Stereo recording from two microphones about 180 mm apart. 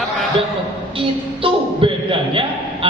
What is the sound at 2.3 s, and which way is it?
Speech, 30° right (ahead or behind).